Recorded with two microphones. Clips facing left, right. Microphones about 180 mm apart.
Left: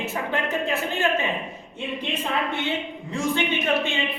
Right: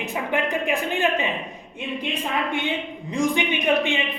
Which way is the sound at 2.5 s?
15° right (ahead or behind).